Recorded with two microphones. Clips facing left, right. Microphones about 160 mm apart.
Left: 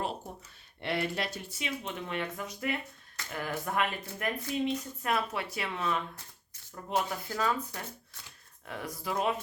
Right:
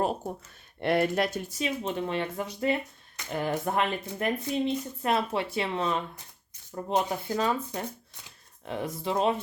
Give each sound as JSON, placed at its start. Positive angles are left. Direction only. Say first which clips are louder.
{"t": 0.8, "sound": "speech", "louder": "right 8 dB", "side_deg": -50}